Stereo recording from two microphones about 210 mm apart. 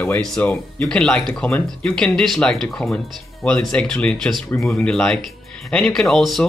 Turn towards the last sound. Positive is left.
turn(degrees=0)  # may be behind; listen again after turning